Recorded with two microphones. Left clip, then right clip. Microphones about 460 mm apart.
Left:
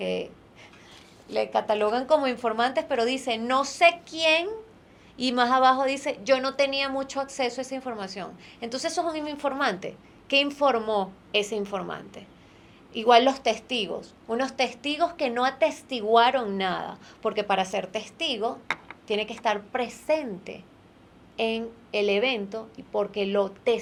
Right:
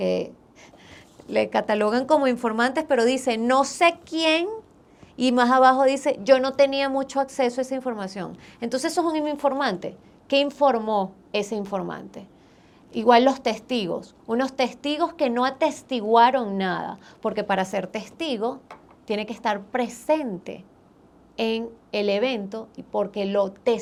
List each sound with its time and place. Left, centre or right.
0.0 s a woman's voice: right
1.3 s a woman's voice: right